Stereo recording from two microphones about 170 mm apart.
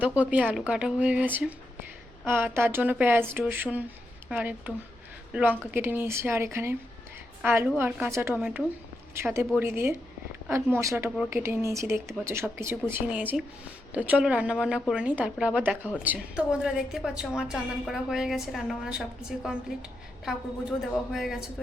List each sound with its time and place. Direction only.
0.0 s a woman's voice: 10° right (ahead or behind)
20.2 s a woman's voice: centre (ahead or behind)